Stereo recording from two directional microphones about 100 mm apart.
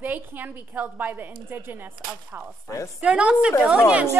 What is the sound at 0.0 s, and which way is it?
A woman's voice, 20° right (ahead or behind).